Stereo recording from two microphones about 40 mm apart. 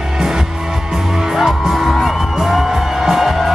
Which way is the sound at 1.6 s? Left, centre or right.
Centre.